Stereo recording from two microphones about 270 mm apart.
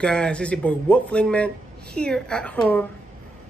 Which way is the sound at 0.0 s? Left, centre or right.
Centre.